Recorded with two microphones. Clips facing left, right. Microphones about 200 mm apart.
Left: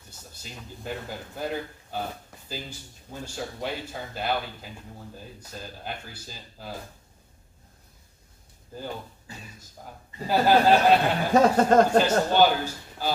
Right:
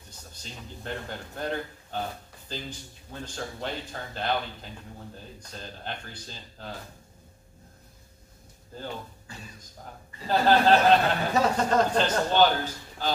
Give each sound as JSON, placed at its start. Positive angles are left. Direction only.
{"t": 0.1, "sound": "a man's voice", "side_deg": 10}
{"t": 10.2, "sound": "a man's voice", "side_deg": 10}
{"t": 11.3, "sound": "speech", "side_deg": 50}
{"t": 12.0, "sound": "a man's voice", "side_deg": 10}